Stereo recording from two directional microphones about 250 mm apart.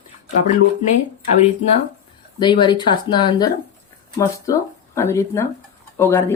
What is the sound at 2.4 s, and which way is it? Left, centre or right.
Speech, centre.